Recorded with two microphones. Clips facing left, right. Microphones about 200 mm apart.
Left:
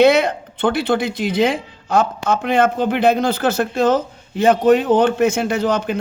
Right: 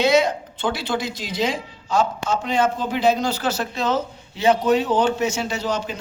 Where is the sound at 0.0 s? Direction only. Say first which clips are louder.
Left 5 dB; 60° left (ahead or behind).